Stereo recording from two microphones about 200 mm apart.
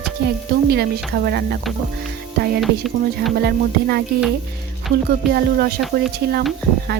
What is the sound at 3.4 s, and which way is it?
Speech, 50° right (ahead or behind).